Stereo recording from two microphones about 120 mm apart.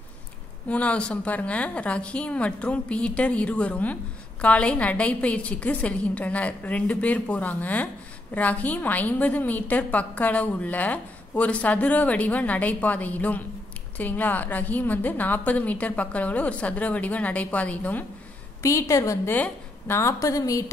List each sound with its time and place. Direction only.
0.7 s a woman's voice: 10° left (ahead or behind)
18.6 s a woman's voice: 25° left (ahead or behind)